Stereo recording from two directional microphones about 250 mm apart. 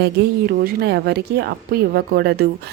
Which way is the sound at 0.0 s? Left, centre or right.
Right.